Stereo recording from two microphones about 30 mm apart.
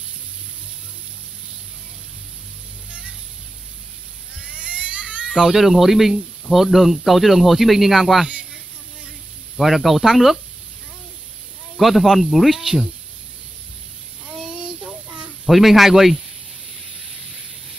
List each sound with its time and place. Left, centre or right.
2.9 s vehicle: right
4.4 s vehicle: right
5.4 s speech: centre
9.6 s speech: centre
11.8 s speech: centre
14.3 s child singing: right
15.4 s speech: centre